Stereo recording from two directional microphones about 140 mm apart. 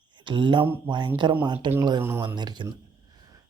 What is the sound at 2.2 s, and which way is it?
Speech, 30° right (ahead or behind).